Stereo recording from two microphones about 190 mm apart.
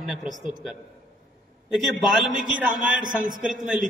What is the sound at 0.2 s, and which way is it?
Speech, 40° right (ahead or behind).